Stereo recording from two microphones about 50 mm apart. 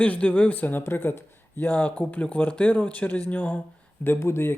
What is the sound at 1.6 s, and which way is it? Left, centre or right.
Speech, left.